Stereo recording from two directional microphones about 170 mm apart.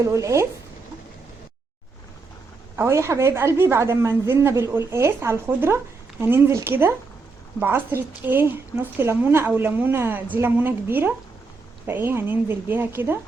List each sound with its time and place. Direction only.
0.0 s a woman's voice: 20° right (ahead or behind)
2.7 s a woman's voice: 15° right (ahead or behind)